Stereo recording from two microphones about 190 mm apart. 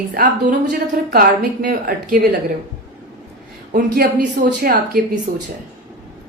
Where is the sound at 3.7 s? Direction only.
50° right (ahead or behind).